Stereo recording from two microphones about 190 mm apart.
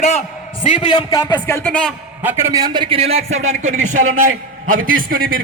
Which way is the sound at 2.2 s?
15° right (ahead or behind).